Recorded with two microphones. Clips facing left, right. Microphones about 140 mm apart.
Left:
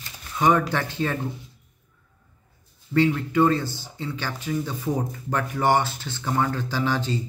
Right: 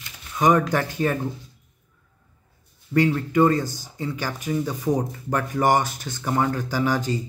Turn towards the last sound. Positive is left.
turn(degrees=-10)  # may be behind; listen again after turning